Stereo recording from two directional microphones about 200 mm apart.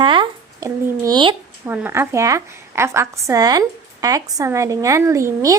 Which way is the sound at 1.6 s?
10° right (ahead or behind).